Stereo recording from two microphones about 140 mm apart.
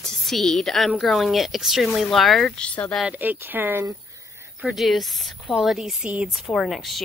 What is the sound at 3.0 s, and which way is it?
Speech, 10° right (ahead or behind).